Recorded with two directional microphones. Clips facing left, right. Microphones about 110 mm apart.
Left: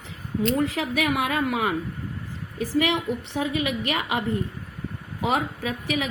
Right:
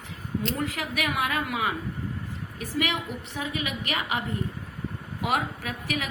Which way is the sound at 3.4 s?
40° left (ahead or behind).